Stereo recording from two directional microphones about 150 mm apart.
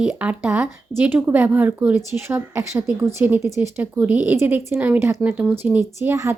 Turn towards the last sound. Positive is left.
turn(degrees=-20)  # may be behind; listen again after turning